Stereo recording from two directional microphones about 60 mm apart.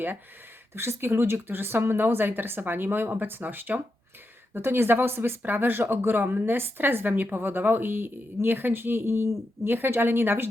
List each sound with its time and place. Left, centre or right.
0.7 s speech: right